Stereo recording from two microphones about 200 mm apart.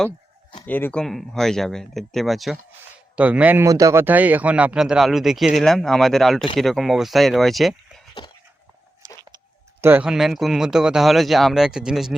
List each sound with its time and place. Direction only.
0.6 s speech: 10° left (ahead or behind)
9.0 s a sound: 20° right (ahead or behind)
9.8 s speech: 10° right (ahead or behind)